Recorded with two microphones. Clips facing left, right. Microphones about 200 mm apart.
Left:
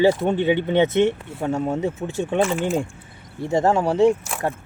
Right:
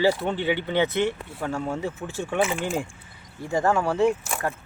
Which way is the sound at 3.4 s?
25° left (ahead or behind).